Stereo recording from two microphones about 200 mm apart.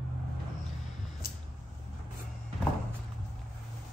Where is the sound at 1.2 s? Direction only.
50° left (ahead or behind).